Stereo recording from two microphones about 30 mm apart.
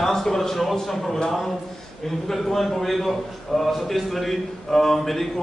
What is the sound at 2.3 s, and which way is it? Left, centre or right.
A man's voice, centre.